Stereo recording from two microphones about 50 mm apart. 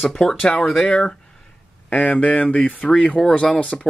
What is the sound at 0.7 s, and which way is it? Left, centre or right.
Speech, left.